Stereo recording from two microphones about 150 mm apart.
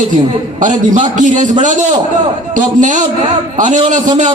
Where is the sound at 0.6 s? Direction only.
55° right (ahead or behind).